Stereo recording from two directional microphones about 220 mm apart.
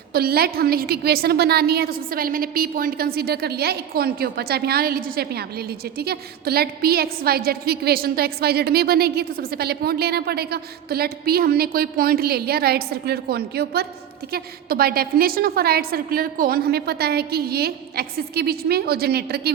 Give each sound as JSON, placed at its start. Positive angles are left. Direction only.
{"t": 0.1, "sound": "a woman's voice", "side_deg": -45}